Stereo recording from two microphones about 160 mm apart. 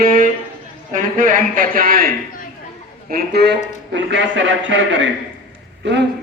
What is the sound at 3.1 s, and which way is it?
Speech, 80° right.